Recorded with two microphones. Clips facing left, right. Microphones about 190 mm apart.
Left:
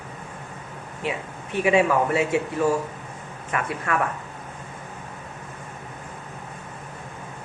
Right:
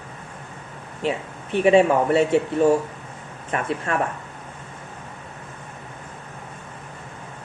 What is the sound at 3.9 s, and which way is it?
Speech, 30° right (ahead or behind).